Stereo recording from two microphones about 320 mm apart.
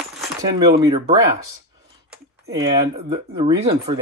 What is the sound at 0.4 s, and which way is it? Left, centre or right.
Speech, centre.